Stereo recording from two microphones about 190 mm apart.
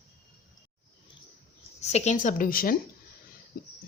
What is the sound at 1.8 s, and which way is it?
A woman's voice, 35° left (ahead or behind).